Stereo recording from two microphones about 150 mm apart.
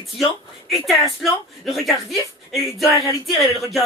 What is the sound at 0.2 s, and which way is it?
Speech, centre (ahead or behind).